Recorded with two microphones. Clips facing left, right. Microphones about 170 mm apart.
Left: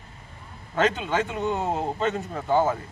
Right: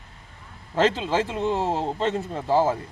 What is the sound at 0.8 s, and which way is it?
Speech, 30° right (ahead or behind).